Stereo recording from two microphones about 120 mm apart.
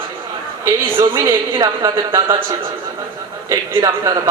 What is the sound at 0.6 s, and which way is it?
A man's voice, 20° right (ahead or behind).